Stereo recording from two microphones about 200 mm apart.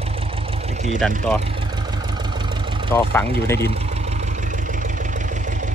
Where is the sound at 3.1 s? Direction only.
15° left (ahead or behind).